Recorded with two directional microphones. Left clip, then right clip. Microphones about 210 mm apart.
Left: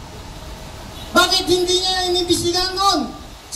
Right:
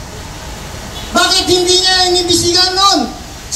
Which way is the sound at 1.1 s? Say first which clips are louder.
Right 4 dB; 55° left (ahead or behind).